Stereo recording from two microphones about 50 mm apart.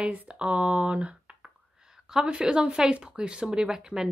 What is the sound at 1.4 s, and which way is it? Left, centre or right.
A woman's voice, centre.